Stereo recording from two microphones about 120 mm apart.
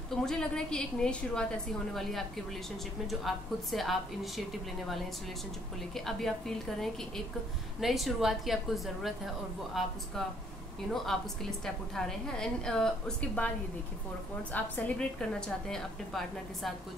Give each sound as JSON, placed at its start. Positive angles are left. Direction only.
{"t": 0.1, "sound": "a woman's voice", "side_deg": 5}
{"t": 5.9, "sound": "a woman's voice", "side_deg": 5}
{"t": 11.1, "sound": "a woman's voice", "side_deg": 0}
{"t": 14.5, "sound": "a woman's voice", "side_deg": 10}